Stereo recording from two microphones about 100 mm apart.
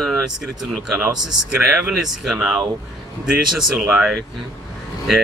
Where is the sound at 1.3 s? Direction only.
10° right (ahead or behind).